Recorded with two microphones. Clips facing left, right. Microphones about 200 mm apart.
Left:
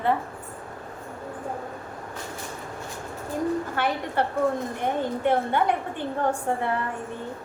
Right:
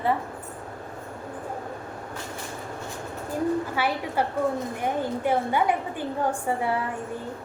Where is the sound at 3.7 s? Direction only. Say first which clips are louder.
Even; 5° right (ahead or behind).